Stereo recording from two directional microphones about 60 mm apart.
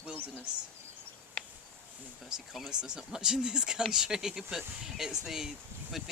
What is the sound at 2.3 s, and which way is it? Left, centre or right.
Speech, centre.